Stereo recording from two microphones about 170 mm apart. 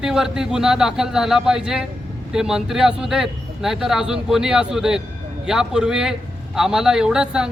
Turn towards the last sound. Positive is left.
turn(degrees=-5)  # may be behind; listen again after turning